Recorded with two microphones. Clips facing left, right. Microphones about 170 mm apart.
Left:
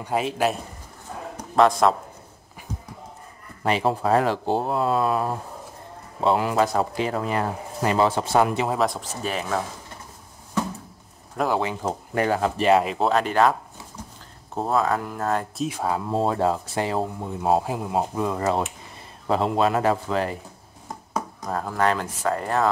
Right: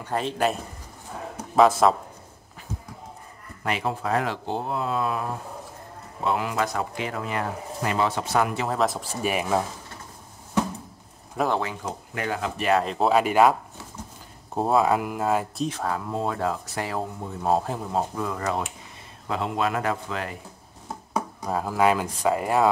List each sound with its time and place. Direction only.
0.0 s speech: 10° left (ahead or behind)
1.3 s a sound: 5° right (ahead or behind)
3.6 s speech: 30° left (ahead or behind)
6.2 s speech: 35° left (ahead or behind)
8.6 s speech: centre (ahead or behind)
9.2 s speech: 15° right (ahead or behind)
11.3 s speech: centre (ahead or behind)
11.8 s speech: 40° left (ahead or behind)
12.8 s speech: centre (ahead or behind)
15.6 s speech: 10° left (ahead or behind)
16.1 s speech: 30° left (ahead or behind)
17.5 s speech: 10° left (ahead or behind)
19.2 s speech: 35° left (ahead or behind)
20.9 s speech: 5° right (ahead or behind)